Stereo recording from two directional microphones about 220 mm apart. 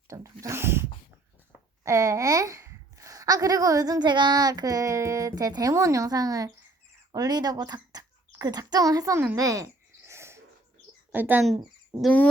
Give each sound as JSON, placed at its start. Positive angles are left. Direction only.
{"t": 0.1, "sound": "a woman's voice", "side_deg": -15}
{"t": 11.5, "sound": "a sound", "side_deg": -20}
{"t": 12.0, "sound": "speech", "side_deg": 5}